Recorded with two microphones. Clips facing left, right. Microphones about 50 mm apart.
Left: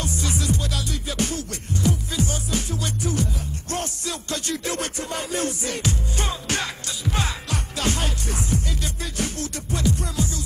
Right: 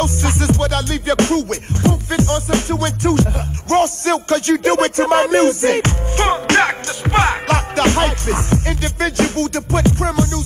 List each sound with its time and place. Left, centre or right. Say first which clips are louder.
0.0 s music: right 9 dB; right
3.7 s a man's voice: right 15 dB; right